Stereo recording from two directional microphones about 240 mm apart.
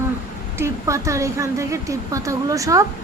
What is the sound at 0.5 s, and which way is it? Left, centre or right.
A woman's voice, centre.